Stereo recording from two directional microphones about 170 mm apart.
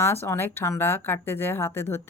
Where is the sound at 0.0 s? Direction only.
15° left (ahead or behind).